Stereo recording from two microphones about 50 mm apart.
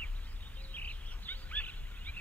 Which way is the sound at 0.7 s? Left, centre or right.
Left.